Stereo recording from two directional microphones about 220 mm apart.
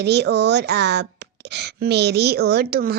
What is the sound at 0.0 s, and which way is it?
Speech, 50° right (ahead or behind).